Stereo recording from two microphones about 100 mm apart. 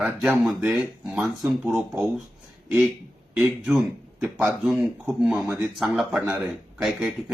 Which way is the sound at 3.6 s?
10° right (ahead or behind).